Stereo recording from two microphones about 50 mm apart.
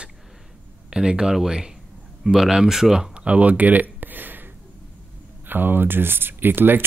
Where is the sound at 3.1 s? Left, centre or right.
Right.